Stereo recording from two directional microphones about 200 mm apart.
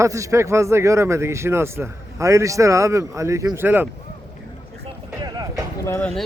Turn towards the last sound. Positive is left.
turn(degrees=5)  # may be behind; listen again after turning